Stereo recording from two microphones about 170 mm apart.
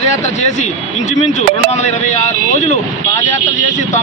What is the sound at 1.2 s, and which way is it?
Speech, 40° left (ahead or behind).